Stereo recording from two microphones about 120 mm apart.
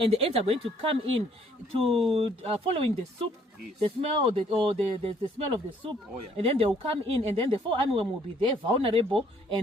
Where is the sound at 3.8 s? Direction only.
50° right (ahead or behind).